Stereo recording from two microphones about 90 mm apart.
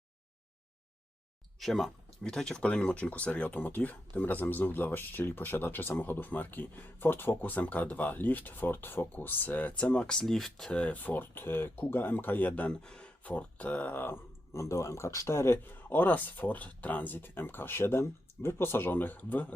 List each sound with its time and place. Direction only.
1.5 s speech: centre (ahead or behind); by 19.5 s 20° left (ahead or behind)